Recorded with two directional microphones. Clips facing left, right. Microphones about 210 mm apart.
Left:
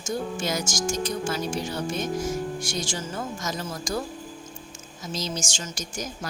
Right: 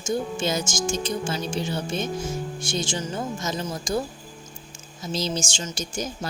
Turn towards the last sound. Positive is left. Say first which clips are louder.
# right 4 dB
turn(degrees=-30)  # may be behind; listen again after turning